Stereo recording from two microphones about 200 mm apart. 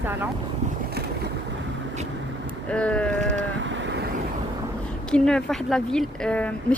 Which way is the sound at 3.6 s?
65° right (ahead or behind).